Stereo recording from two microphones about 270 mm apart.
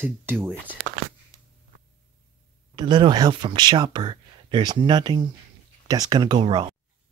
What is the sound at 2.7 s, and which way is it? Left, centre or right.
Speech, centre.